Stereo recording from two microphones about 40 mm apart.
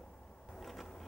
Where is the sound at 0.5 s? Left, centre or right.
Centre.